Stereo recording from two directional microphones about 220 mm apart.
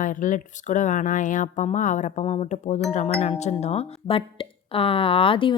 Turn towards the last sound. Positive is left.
turn(degrees=25)  # may be behind; listen again after turning